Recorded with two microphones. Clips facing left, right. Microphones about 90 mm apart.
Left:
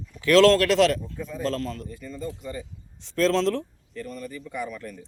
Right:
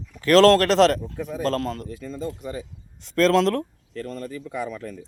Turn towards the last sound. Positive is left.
turn(degrees=-90)